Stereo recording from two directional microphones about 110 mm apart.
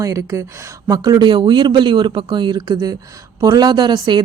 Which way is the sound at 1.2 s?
45° right (ahead or behind).